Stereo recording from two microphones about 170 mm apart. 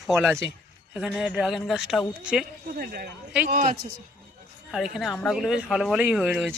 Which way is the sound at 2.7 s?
65° right (ahead or behind).